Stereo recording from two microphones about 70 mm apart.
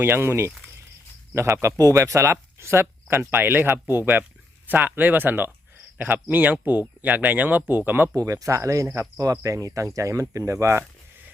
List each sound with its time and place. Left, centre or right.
0.0 s speech: right
8.1 s speech: right